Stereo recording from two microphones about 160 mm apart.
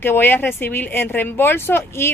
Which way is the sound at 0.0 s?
15° left (ahead or behind).